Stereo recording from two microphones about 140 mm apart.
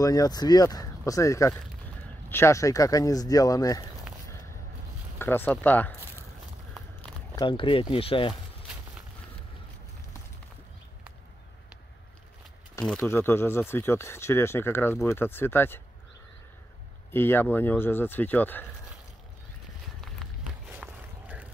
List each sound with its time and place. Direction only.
0.0 s speech: 25° left (ahead or behind)
5.2 s speech: 15° left (ahead or behind)
7.3 s speech: 35° left (ahead or behind)
12.8 s speech: 20° left (ahead or behind)
17.1 s speech: 15° left (ahead or behind)
20.6 s a sound: 10° right (ahead or behind)